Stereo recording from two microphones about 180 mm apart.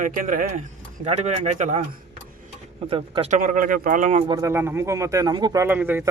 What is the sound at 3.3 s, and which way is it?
Speech, 50° right (ahead or behind).